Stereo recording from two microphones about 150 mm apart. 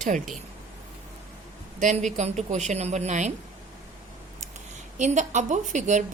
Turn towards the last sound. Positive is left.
turn(degrees=-55)  # may be behind; listen again after turning